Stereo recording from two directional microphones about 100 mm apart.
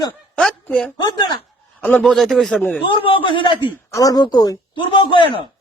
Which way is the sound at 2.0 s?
Centre (ahead or behind).